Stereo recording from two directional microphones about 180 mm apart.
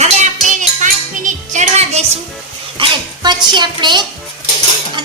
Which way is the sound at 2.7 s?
25° right (ahead or behind).